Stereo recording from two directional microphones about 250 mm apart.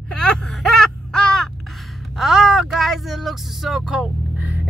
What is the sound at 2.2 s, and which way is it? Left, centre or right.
Speech, centre.